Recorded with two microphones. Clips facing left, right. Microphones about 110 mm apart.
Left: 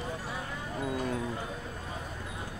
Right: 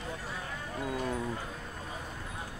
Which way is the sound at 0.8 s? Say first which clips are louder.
Left 1 dB; centre (ahead or behind).